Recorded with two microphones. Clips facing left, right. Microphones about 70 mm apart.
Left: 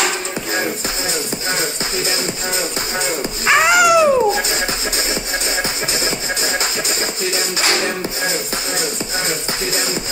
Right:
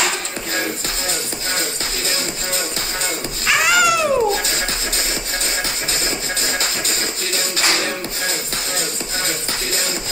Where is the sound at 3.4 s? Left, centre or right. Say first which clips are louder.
Left 4 dB; left.